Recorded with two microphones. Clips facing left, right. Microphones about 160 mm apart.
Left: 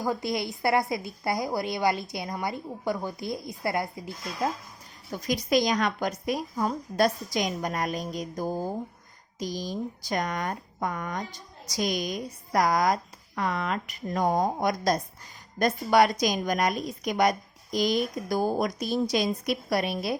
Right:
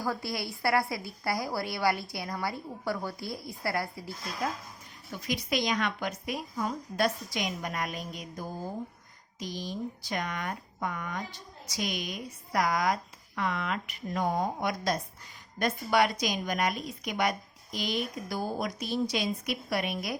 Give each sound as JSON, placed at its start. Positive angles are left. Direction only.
{"t": 0.0, "sound": "a woman's voice", "side_deg": 20}
{"t": 5.1, "sound": "speech", "side_deg": 40}